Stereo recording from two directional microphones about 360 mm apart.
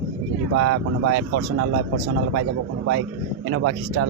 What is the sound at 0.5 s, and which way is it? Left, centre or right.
Speech, right.